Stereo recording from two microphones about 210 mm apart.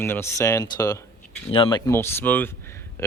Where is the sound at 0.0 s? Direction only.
10° left (ahead or behind).